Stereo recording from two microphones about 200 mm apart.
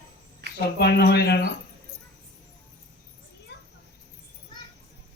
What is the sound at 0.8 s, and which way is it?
Speech, 55° left (ahead or behind).